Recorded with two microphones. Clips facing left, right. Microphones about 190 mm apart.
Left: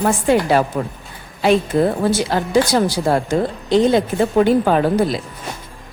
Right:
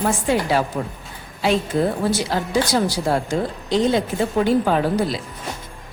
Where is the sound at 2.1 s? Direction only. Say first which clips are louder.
Left 4 dB; 55° left (ahead or behind).